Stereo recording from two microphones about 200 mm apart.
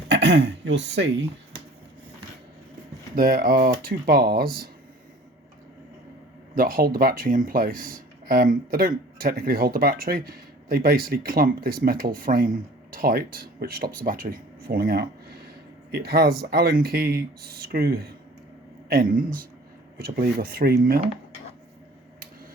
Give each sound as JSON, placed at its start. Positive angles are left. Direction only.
{"t": 0.1, "sound": "speech", "side_deg": -60}
{"t": 3.2, "sound": "speech", "side_deg": -45}
{"t": 6.6, "sound": "speech", "side_deg": -45}